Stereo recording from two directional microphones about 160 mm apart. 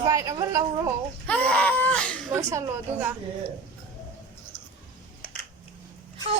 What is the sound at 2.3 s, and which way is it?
Speech, 15° right (ahead or behind).